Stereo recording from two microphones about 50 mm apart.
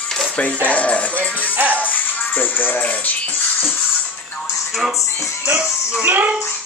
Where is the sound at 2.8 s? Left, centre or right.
Left.